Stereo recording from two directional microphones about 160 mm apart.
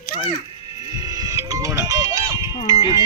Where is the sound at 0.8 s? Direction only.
25° right (ahead or behind).